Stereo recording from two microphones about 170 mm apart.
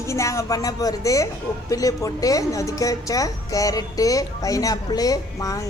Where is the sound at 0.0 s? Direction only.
15° left (ahead or behind).